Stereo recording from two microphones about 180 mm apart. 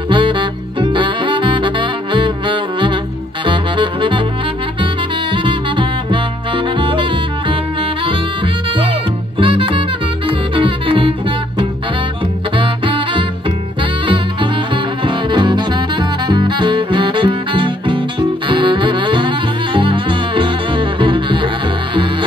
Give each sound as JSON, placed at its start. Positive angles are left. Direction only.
{"t": 0.1, "sound": "saxophone", "side_deg": -25}
{"t": 5.3, "sound": "music", "side_deg": -30}
{"t": 9.4, "sound": "music", "side_deg": -30}